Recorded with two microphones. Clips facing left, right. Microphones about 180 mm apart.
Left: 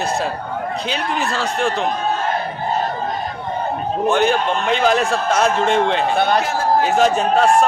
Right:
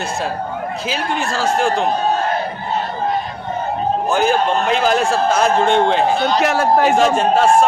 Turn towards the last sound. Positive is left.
turn(degrees=0)  # may be behind; listen again after turning